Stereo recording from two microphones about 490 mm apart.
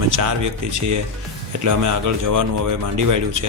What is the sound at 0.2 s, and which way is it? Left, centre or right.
Speech, right.